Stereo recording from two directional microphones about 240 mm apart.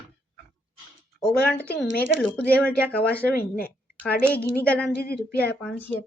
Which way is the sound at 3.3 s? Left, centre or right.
Left.